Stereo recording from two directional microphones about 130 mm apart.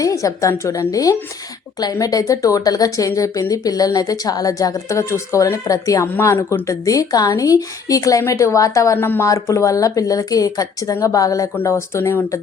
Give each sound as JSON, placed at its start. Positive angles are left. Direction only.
{"t": 0.0, "sound": "speech", "side_deg": 25}